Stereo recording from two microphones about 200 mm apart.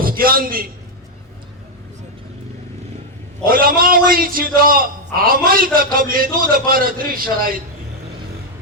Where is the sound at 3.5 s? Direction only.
45° right (ahead or behind).